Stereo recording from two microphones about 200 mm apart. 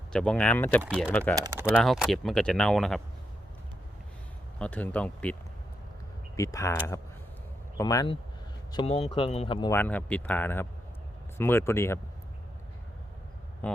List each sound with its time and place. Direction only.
0.1 s speech: 5° left (ahead or behind)
0.8 s speech: 10° right (ahead or behind)
1.1 s speech: 5° left (ahead or behind)
1.4 s speech: 15° right (ahead or behind)
1.7 s speech: centre (ahead or behind)
4.6 s speech: 5° left (ahead or behind)
7.8 s speech: 15° left (ahead or behind)
9.7 s speech: 10° left (ahead or behind)